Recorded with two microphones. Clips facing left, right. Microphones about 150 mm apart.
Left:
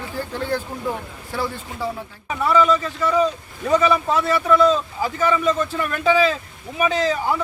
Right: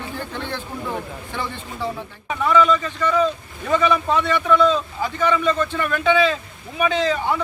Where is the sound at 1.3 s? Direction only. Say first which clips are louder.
Left 6 dB; 5° left (ahead or behind).